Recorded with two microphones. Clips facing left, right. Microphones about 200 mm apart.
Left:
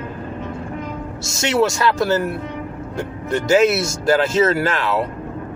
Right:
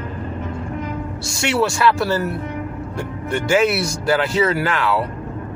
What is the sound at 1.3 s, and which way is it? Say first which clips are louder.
Speech: left 2 dB; 40° left (ahead or behind).